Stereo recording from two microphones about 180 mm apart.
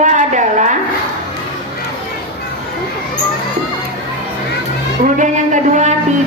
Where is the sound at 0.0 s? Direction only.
45° right (ahead or behind).